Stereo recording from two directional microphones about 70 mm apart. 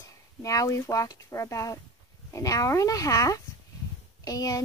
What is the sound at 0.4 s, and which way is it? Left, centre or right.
Speech, left.